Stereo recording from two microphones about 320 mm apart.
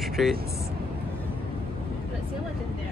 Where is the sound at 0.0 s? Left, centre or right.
Centre.